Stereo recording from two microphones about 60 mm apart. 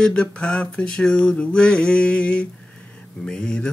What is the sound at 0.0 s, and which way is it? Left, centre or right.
Mantra, centre.